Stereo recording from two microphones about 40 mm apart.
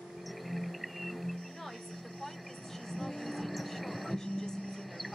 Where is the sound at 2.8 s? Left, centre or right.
Centre.